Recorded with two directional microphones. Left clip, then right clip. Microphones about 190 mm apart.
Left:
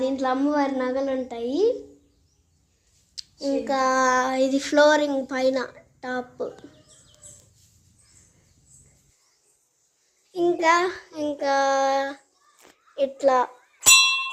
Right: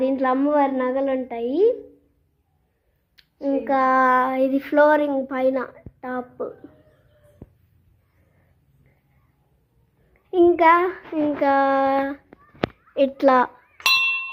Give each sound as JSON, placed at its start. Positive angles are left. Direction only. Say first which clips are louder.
{"t": 0.0, "sound": "a woman's voice", "louder": "right 3 dB", "side_deg": -20}
{"t": 3.2, "sound": "child singing", "louder": "right 2 dB", "side_deg": -10}
{"t": 10.3, "sound": "child singing", "louder": "right 5 dB", "side_deg": 0}
{"t": 12.9, "sound": "a child's voice", "louder": "right 3 dB", "side_deg": 0}